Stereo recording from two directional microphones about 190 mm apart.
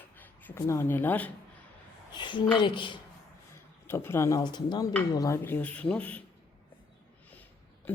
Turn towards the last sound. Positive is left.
turn(degrees=10)  # may be behind; listen again after turning